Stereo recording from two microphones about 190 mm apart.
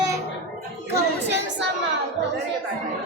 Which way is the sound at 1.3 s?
70° right (ahead or behind).